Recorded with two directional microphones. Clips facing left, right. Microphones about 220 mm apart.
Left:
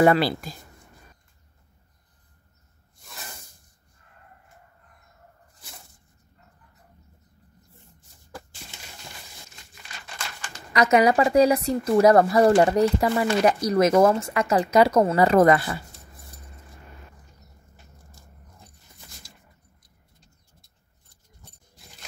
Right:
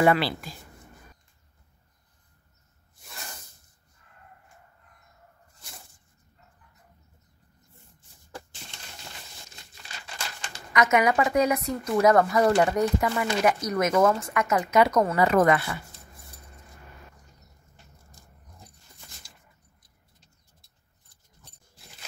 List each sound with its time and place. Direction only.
0.0 s speech: 40° left (ahead or behind)
3.0 s snake: centre (ahead or behind)
5.6 s a sound: centre (ahead or behind)
10.7 s speech: 35° left (ahead or behind)